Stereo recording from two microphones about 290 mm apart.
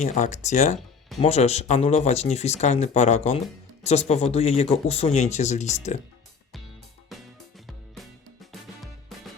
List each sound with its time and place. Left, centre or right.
0.0 s speech: left
7.1 s music: centre